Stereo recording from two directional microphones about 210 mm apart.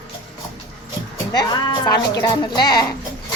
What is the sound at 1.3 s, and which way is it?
A woman's voice, 20° left (ahead or behind).